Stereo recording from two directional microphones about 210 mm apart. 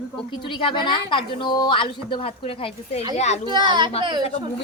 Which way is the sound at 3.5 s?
20° right (ahead or behind).